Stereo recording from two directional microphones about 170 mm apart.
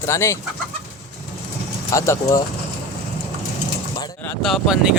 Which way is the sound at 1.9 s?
15° left (ahead or behind).